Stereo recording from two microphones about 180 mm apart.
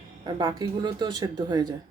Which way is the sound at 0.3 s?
25° right (ahead or behind).